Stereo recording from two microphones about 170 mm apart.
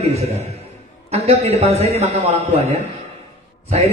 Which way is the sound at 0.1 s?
40° right (ahead or behind).